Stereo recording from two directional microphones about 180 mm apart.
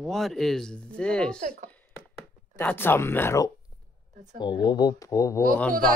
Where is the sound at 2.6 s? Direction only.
10° left (ahead or behind).